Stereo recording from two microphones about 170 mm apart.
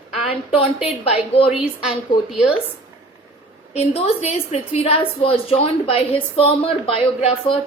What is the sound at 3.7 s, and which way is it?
A woman's voice, 40° left (ahead or behind).